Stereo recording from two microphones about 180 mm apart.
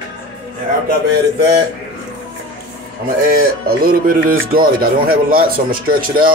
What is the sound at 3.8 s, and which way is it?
Speech, 50° right (ahead or behind).